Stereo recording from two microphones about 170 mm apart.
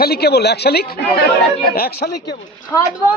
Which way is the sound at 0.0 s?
70° left (ahead or behind).